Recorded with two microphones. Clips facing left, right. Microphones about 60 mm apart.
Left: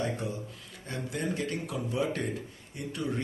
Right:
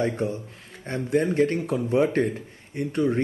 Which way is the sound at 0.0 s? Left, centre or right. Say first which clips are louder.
Right 7 dB; right.